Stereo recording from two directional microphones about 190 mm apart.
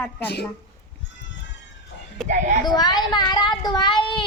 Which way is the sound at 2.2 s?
Centre (ahead or behind).